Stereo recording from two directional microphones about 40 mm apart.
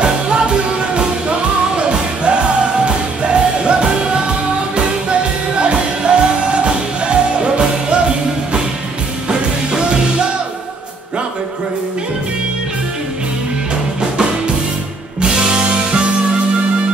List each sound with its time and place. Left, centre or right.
0.0 s music: right
9.3 s music: right
15.1 s music: right